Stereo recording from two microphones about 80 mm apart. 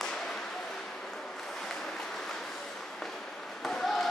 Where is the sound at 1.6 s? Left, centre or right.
Centre.